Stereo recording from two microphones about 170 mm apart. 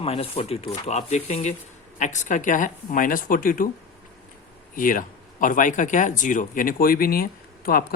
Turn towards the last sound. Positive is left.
turn(degrees=60)  # may be behind; listen again after turning